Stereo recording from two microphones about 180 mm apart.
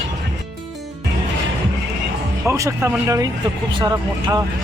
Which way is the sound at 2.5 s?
15° right (ahead or behind).